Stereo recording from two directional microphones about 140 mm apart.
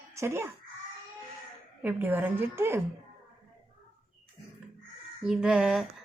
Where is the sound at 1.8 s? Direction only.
15° right (ahead or behind).